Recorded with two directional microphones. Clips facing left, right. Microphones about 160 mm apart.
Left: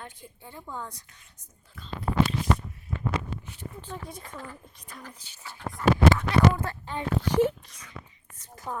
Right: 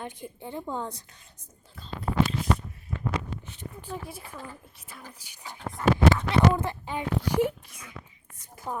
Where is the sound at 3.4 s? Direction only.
20° right (ahead or behind).